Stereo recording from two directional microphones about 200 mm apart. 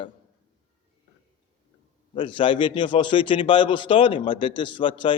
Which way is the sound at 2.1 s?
25° left (ahead or behind).